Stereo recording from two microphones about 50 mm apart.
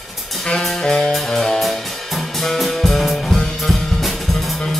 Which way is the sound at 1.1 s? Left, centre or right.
Centre.